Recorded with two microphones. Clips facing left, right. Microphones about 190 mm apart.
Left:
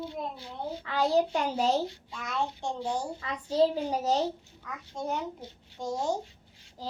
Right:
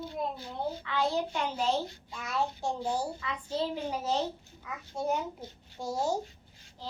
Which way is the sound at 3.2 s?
40° left (ahead or behind).